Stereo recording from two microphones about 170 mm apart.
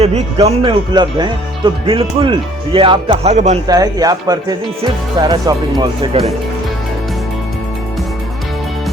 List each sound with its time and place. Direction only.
0.0 s speech: 35° right (ahead or behind)
3.3 s speech: 45° right (ahead or behind)
3.7 s speech: 20° right (ahead or behind)